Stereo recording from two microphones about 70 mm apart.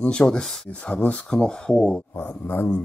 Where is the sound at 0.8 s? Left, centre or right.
Left.